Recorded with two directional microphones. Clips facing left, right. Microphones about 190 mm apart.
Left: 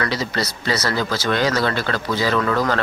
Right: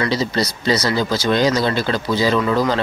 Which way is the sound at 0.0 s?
25° right (ahead or behind).